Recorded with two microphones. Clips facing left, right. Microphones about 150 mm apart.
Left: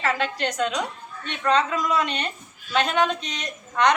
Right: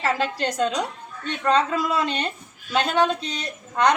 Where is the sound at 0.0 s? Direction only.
35° right (ahead or behind).